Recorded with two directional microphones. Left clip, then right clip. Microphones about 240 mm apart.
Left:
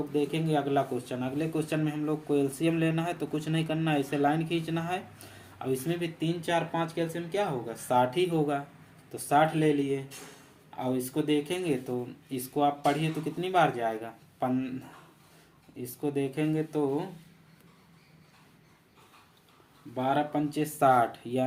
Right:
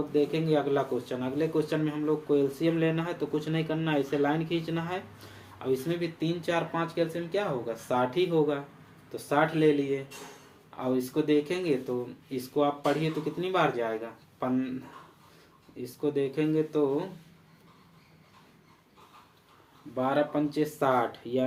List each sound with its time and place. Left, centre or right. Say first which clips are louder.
0.3 s speech: right 2 dB; left
15.8 s speech: right 2 dB; left
20.0 s speech: right 1 dB; left